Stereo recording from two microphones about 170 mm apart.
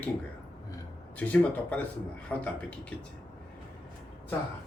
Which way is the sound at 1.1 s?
10° left (ahead or behind).